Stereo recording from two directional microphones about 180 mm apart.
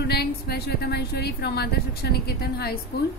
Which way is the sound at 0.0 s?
65° left (ahead or behind).